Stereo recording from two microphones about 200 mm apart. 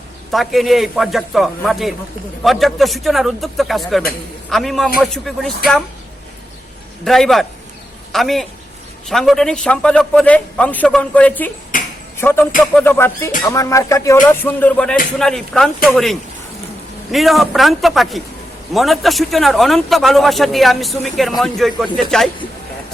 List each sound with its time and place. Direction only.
0.3 s a man's voice: centre (ahead or behind)
7.0 s a man's voice: centre (ahead or behind)
11.7 s a sound: 40° left (ahead or behind)
12.1 s a man's voice: 10° left (ahead or behind)
12.5 s music: 5° left (ahead or behind)
15.2 s a man's voice: centre (ahead or behind)